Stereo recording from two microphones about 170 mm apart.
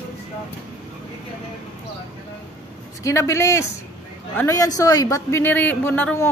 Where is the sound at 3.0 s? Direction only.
15° left (ahead or behind).